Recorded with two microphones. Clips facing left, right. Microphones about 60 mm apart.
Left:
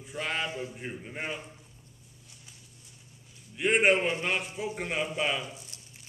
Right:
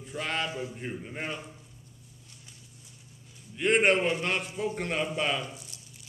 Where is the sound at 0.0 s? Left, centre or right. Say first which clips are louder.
Right 1 dB; centre.